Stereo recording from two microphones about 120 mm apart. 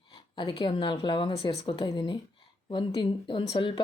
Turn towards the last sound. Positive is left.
turn(degrees=45)  # may be behind; listen again after turning